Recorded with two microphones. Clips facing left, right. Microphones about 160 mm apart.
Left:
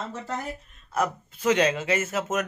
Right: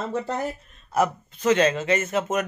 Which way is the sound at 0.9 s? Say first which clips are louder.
Right 4 dB; 10° right (ahead or behind).